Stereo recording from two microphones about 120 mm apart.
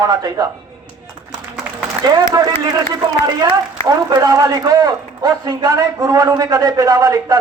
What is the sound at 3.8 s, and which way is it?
A man's voice, 30° right (ahead or behind).